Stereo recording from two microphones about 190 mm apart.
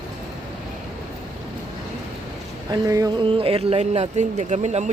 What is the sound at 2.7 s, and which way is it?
Speech, 20° right (ahead or behind).